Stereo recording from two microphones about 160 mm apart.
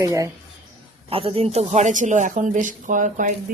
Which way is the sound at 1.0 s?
35° right (ahead or behind).